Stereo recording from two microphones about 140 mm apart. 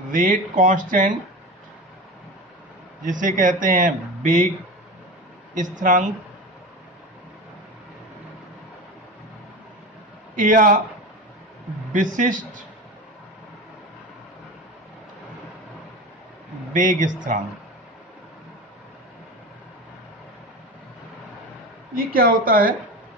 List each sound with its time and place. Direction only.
0.1 s speech: 70° right (ahead or behind)
3.0 s speech: 65° right (ahead or behind)
5.5 s speech: 65° right (ahead or behind)
10.4 s speech: 70° right (ahead or behind)
11.9 s speech: 65° right (ahead or behind)
16.7 s speech: 65° right (ahead or behind)
21.9 s speech: 90° right